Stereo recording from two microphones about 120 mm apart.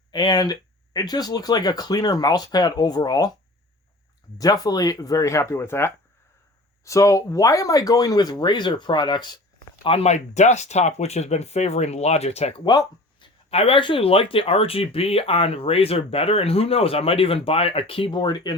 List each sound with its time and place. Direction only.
0.1 s speech: 35° left (ahead or behind)
4.4 s speech: 30° left (ahead or behind)
9.8 s speech: 55° left (ahead or behind)
12.6 s speech: 40° left (ahead or behind)
13.5 s speech: 55° left (ahead or behind); by 18.5 s 40° left (ahead or behind)